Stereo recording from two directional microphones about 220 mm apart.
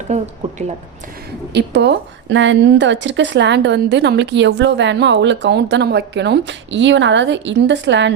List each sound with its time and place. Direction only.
0.1 s speech: 30° right (ahead or behind)
1.5 s a woman's voice: 50° right (ahead or behind)